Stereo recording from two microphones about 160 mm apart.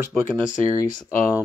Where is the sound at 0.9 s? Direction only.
55° left (ahead or behind).